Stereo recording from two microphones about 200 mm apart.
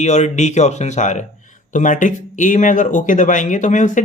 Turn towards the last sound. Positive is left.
turn(degrees=40)  # may be behind; listen again after turning